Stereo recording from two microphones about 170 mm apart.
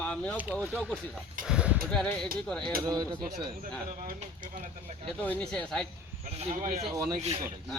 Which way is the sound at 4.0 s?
50° right (ahead or behind).